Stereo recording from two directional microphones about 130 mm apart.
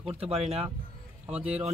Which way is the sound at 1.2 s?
10° right (ahead or behind).